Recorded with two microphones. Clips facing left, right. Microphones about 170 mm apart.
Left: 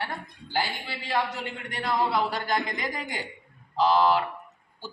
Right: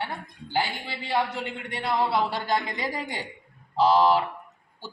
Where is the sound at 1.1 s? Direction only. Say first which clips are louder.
Right 2 dB; 25° right (ahead or behind).